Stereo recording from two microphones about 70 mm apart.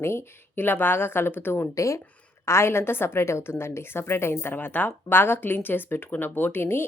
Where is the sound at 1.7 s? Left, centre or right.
Left.